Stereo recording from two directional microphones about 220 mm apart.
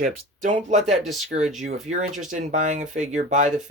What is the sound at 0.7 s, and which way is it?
Speech, 30° right (ahead or behind).